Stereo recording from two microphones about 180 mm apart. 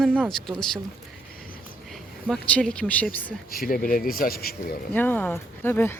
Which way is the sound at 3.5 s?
55° left (ahead or behind).